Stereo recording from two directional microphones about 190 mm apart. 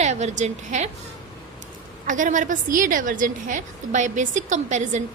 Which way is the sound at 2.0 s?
40° right (ahead or behind).